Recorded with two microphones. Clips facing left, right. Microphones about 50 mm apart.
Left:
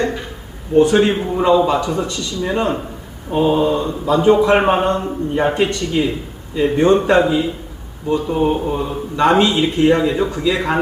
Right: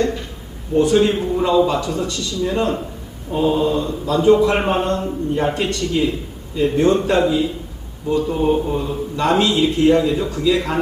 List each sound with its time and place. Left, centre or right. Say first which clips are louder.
0.8 s a man's voice: left 2 dB; left